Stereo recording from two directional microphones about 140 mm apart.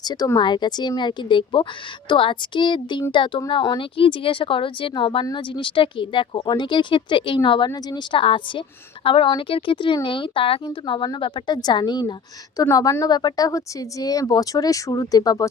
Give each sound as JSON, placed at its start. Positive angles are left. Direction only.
{"t": 0.0, "sound": "a woman's voice", "side_deg": 30}